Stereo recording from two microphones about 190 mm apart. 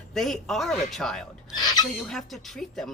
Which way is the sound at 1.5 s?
20° left (ahead or behind).